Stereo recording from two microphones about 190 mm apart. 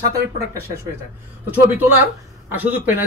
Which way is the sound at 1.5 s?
10° right (ahead or behind).